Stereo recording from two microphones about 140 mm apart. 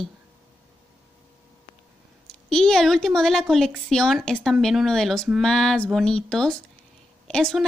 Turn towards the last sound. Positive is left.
turn(degrees=5)  # may be behind; listen again after turning